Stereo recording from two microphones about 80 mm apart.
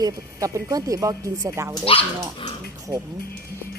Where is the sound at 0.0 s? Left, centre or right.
Right.